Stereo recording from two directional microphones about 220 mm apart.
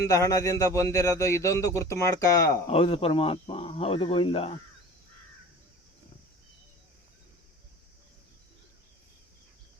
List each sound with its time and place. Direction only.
0.1 s speech: 15° left (ahead or behind)
2.6 s speech: 25° left (ahead or behind)